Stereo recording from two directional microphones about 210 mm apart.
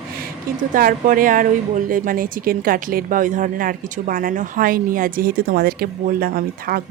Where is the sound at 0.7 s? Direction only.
40° right (ahead or behind).